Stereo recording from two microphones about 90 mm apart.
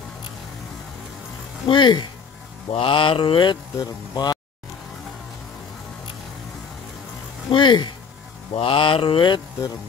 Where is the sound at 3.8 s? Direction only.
50° left (ahead or behind).